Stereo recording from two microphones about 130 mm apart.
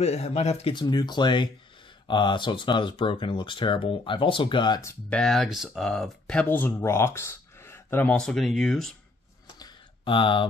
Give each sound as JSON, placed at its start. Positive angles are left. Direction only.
{"t": 0.0, "sound": "speech", "side_deg": 55}
{"t": 0.7, "sound": "speech", "side_deg": 35}
{"t": 5.1, "sound": "speech", "side_deg": 5}
{"t": 9.6, "sound": "a sound", "side_deg": 35}